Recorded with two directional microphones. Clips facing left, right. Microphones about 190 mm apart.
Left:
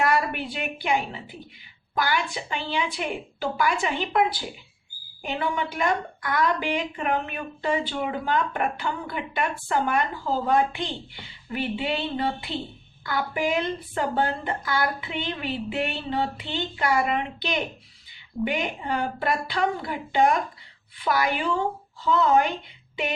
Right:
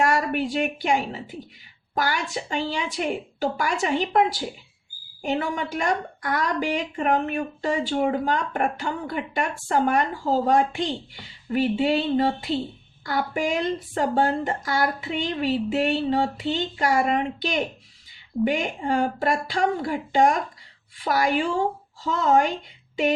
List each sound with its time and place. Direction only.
0.1 s a woman's voice: 45° right (ahead or behind)